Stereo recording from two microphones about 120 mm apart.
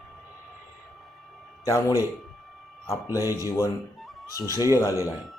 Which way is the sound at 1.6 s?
30° left (ahead or behind).